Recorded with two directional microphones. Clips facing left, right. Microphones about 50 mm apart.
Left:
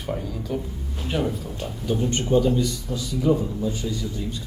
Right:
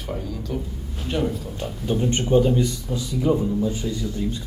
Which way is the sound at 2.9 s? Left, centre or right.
Centre.